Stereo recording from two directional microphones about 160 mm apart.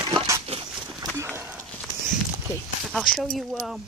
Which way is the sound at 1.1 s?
15° right (ahead or behind).